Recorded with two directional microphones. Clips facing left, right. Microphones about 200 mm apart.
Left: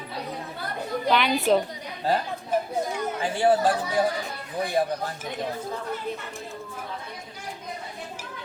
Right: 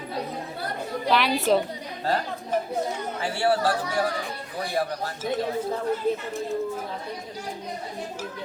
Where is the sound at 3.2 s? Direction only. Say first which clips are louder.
Left 2 dB; 15° left (ahead or behind).